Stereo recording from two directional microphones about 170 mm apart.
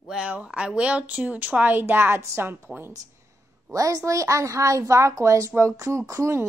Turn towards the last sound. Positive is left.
turn(degrees=-15)  # may be behind; listen again after turning